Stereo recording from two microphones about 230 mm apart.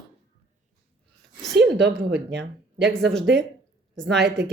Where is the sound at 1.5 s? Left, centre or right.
Right.